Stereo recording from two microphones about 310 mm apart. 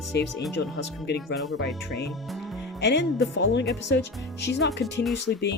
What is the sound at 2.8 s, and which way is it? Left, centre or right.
Speech, left.